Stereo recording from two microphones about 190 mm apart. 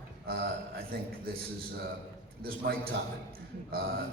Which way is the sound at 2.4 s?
55° right (ahead or behind).